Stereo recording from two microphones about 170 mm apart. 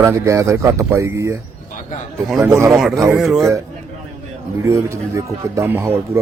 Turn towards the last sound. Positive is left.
turn(degrees=-15)  # may be behind; listen again after turning